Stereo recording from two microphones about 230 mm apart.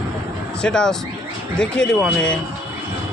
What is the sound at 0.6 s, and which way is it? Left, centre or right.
Speech, centre.